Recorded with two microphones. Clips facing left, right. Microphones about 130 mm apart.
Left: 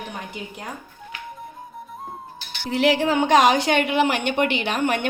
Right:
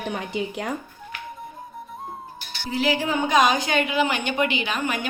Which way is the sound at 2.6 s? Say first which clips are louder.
Left 4 dB; 70° left (ahead or behind).